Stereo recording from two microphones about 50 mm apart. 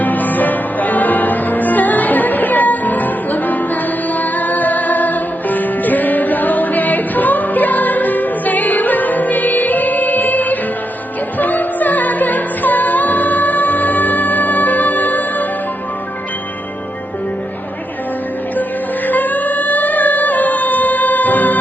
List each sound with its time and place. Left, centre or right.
0.0 s music: left
19.0 s singing: left